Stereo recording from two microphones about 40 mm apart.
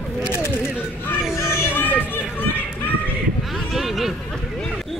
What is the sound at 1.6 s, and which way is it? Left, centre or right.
Run, left.